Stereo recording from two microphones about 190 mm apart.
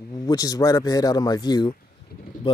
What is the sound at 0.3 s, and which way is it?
Speech, 20° left (ahead or behind).